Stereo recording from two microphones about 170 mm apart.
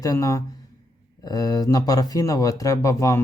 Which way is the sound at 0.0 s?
20° left (ahead or behind).